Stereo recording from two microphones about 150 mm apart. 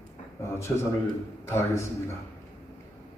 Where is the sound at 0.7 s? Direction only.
15° left (ahead or behind).